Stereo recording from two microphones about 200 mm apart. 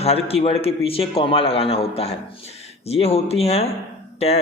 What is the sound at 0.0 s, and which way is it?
A man's voice, 30° left (ahead or behind).